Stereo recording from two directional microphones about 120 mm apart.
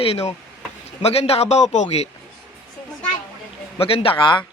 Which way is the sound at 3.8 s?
50° left (ahead or behind).